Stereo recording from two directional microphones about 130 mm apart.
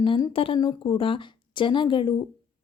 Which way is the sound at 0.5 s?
35° left (ahead or behind).